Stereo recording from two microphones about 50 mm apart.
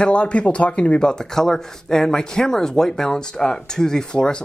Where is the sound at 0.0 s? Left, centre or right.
Left.